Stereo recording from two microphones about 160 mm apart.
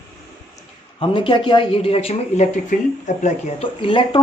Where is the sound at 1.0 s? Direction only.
30° left (ahead or behind).